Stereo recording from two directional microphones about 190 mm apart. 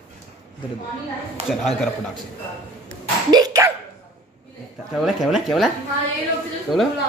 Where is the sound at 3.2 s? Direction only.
20° right (ahead or behind).